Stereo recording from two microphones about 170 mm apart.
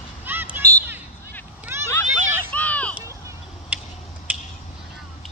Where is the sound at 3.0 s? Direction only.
15° right (ahead or behind).